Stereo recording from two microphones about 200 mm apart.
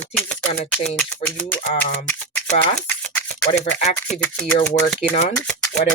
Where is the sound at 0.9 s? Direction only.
5° left (ahead or behind).